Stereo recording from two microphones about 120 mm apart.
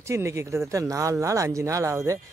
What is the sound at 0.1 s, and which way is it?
Speech, 25° right (ahead or behind).